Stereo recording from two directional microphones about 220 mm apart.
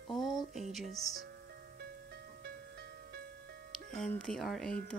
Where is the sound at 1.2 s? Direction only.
45° right (ahead or behind).